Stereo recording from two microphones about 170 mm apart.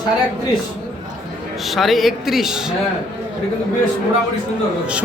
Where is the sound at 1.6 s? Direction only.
Centre (ahead or behind).